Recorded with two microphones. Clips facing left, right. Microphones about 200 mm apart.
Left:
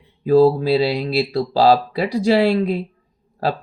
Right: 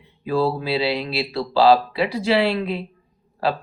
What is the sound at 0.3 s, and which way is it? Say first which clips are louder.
Speech: left 8 dB; 45° left (ahead or behind).